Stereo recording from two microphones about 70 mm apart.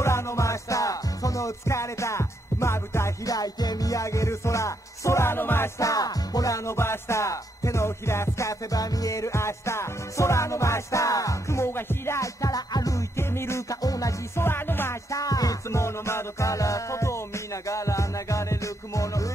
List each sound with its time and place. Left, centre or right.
0.0 s music: left
3.3 s music: left
5.8 s music: left
12.2 s music: left
13.1 s music: left
13.8 s music: left
14.4 s music: left
15.0 s music: left
15.8 s music: left